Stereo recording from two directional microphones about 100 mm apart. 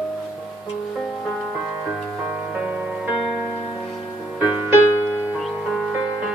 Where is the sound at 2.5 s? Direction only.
10° right (ahead or behind).